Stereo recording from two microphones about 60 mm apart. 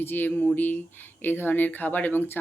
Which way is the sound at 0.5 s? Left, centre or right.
Left.